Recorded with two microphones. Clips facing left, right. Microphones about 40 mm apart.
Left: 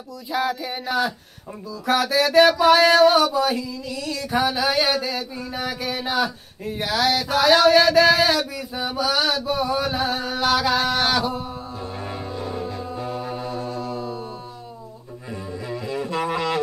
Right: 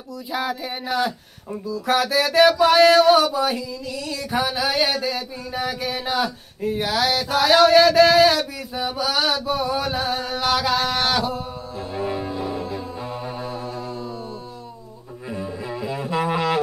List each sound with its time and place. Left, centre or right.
0.3 s a sound: centre
12.0 s music: centre
15.3 s music: centre